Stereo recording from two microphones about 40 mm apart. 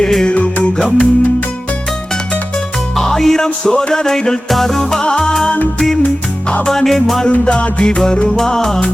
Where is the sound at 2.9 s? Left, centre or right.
Centre.